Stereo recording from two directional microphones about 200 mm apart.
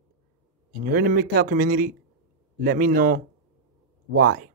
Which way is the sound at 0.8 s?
45° right (ahead or behind).